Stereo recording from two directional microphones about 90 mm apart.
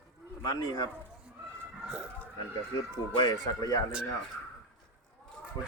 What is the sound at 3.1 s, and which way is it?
Speech, 55° left (ahead or behind).